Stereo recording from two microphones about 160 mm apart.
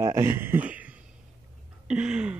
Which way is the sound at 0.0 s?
15° right (ahead or behind).